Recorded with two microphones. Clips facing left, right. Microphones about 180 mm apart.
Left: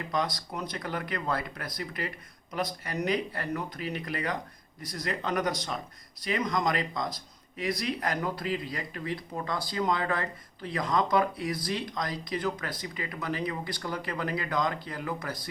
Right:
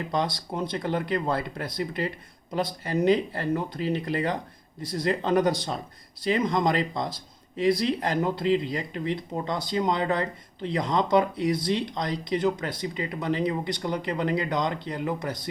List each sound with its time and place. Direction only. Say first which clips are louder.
0.1 s speech: right 2 dB; 25° right (ahead or behind)